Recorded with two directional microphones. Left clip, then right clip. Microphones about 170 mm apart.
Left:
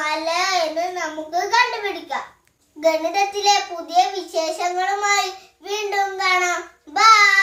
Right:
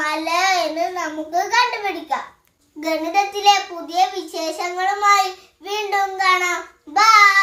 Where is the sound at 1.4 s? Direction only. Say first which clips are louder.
Left 1 dB; 10° left (ahead or behind).